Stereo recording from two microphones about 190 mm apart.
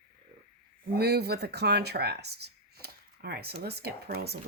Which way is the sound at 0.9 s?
55° right (ahead or behind).